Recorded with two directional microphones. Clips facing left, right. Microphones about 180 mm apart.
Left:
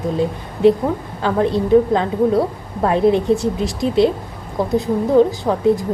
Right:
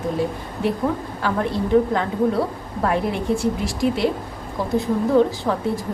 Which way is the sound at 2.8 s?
25° left (ahead or behind).